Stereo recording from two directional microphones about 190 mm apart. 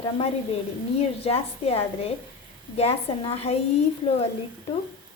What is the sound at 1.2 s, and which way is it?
A woman's voice, 30° left (ahead or behind).